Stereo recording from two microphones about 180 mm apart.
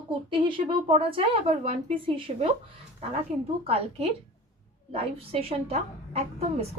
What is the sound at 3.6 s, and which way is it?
A woman's voice, 35° right (ahead or behind).